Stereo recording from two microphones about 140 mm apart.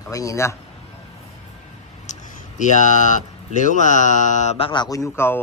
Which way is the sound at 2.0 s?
60° left (ahead or behind).